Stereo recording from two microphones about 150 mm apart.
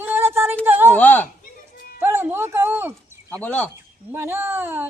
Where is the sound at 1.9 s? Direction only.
15° right (ahead or behind).